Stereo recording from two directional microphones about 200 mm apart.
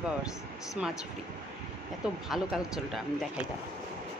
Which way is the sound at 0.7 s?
Centre (ahead or behind).